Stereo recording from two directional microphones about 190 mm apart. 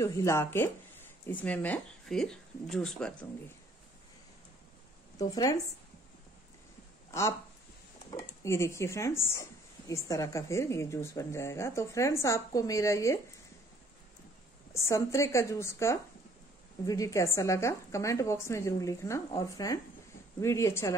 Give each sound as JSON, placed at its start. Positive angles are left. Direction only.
{"t": 0.0, "sound": "a woman's voice", "side_deg": 15}
{"t": 5.3, "sound": "a woman's voice", "side_deg": 20}
{"t": 7.1, "sound": "a woman's voice", "side_deg": 15}
{"t": 14.7, "sound": "a woman's voice", "side_deg": 15}